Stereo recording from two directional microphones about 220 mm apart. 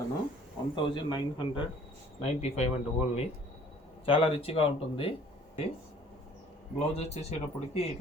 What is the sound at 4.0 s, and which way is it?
Speech, 25° left (ahead or behind).